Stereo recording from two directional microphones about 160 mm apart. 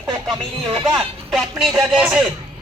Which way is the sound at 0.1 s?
25° right (ahead or behind).